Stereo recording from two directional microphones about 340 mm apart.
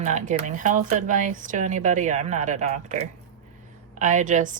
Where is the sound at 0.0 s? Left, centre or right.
Right.